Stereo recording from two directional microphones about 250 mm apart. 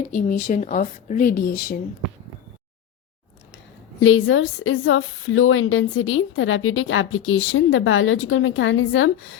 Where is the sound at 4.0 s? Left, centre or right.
Left.